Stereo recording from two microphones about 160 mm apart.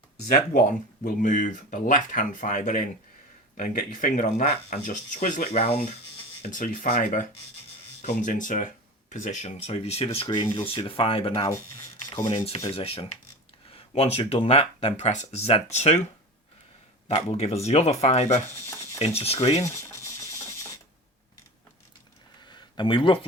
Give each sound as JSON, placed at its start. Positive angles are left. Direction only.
{"t": 0.3, "sound": "speech", "side_deg": 60}
{"t": 5.5, "sound": "speech", "side_deg": 40}
{"t": 6.5, "sound": "speech", "side_deg": 55}
{"t": 10.2, "sound": "speech", "side_deg": 25}
{"t": 12.1, "sound": "speech", "side_deg": 20}
{"t": 12.5, "sound": "speech", "side_deg": 35}
{"t": 17.1, "sound": "speech", "side_deg": 40}
{"t": 19.6, "sound": "a sound", "side_deg": 15}
{"t": 22.4, "sound": "a sound", "side_deg": 30}